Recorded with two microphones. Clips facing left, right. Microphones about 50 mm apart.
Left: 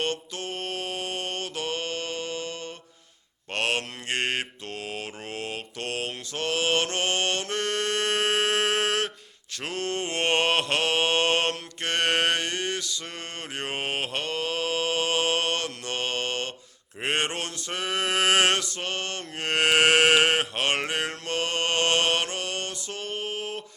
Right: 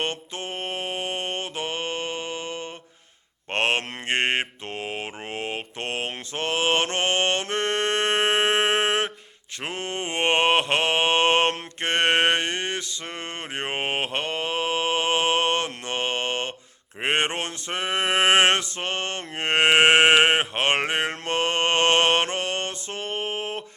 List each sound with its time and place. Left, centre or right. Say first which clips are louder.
0.0 s mantra: right 1 dB; right
17.0 s male singing: right 3 dB; right